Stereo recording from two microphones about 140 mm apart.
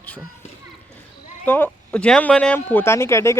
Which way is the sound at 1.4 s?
15° left (ahead or behind).